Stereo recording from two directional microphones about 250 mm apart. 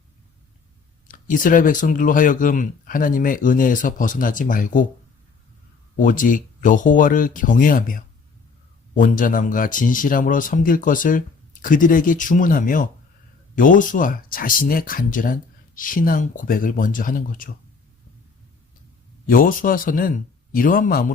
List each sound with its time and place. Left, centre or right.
1.0 s speech: left
6.0 s speech: left
19.3 s speech: left